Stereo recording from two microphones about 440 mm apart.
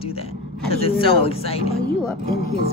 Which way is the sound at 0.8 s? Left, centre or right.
Centre.